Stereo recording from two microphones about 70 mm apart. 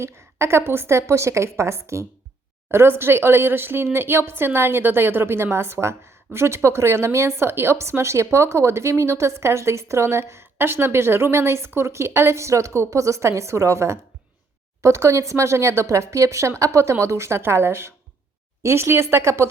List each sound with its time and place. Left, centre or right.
0.0 s a woman's voice: right